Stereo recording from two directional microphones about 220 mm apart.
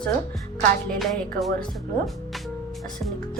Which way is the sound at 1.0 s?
Centre (ahead or behind).